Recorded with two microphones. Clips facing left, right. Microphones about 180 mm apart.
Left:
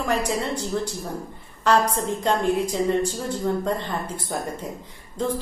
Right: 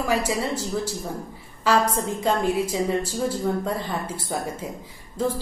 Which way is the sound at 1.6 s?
5° right (ahead or behind).